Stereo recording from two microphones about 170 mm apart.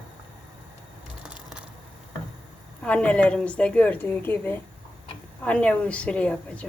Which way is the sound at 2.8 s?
5° left (ahead or behind).